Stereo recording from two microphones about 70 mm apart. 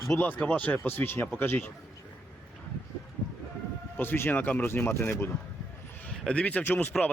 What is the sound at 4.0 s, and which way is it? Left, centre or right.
Speech, left.